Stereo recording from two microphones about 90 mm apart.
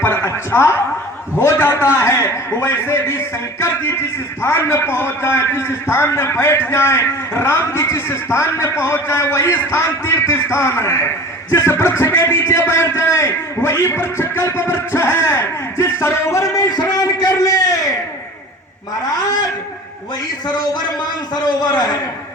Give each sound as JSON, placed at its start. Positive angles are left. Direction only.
{"t": 0.0, "sound": "chuckle", "side_deg": 25}
{"t": 1.4, "sound": "a man's voice", "side_deg": 30}
{"t": 4.4, "sound": "a man's voice", "side_deg": 30}
{"t": 16.7, "sound": "a sound", "side_deg": 45}
{"t": 21.4, "sound": "a man's voice", "side_deg": 50}